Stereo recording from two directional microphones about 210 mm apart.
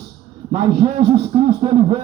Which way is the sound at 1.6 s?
30° right (ahead or behind).